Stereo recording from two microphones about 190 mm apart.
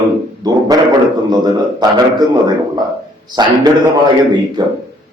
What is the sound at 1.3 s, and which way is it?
Speech, 20° right (ahead or behind).